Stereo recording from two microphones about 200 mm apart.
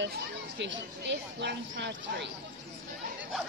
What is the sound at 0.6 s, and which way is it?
Speech, 60° right (ahead or behind).